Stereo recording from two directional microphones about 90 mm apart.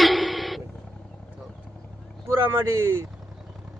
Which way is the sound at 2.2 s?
30° right (ahead or behind).